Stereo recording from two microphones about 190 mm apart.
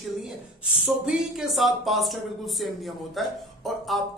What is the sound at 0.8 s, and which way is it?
Speech, 5° right (ahead or behind).